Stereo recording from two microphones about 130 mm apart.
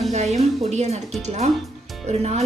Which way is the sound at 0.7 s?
60° right (ahead or behind).